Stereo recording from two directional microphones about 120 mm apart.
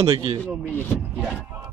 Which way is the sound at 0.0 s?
40° right (ahead or behind).